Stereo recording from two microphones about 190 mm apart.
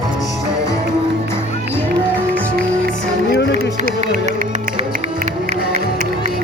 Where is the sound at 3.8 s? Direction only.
40° right (ahead or behind).